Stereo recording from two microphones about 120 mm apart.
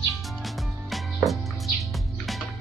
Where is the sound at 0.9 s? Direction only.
Centre (ahead or behind).